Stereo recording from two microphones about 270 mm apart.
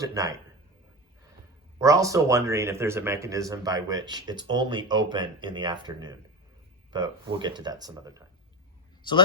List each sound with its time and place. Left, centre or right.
0.0 s speech: centre
1.8 s speech: centre